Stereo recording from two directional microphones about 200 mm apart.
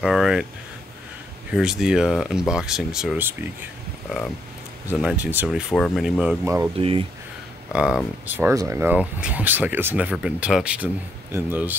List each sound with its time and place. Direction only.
0.0 s speech: 5° right (ahead or behind)
1.5 s speech: 5° right (ahead or behind)
4.8 s speech: 5° right (ahead or behind)
6.8 s speech: 30° right (ahead or behind)
7.7 s speech: 5° right (ahead or behind)